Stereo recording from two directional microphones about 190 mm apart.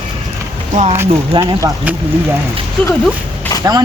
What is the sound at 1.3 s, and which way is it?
Speech, 20° right (ahead or behind).